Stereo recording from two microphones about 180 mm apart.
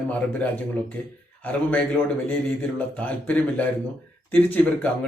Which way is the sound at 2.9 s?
10° left (ahead or behind).